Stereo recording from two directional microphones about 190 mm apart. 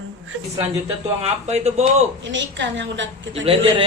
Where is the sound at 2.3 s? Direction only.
70° right (ahead or behind).